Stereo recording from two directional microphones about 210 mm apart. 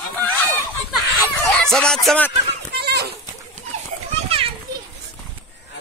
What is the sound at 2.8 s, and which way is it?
Goat, 50° right (ahead or behind).